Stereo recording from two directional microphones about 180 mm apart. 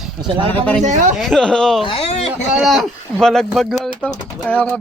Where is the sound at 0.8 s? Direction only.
45° right (ahead or behind).